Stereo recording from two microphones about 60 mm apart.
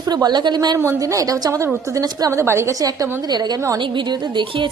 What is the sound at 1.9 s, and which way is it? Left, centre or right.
Speech, right.